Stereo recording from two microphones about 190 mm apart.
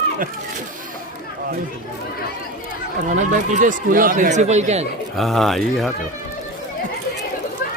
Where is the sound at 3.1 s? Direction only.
40° right (ahead or behind).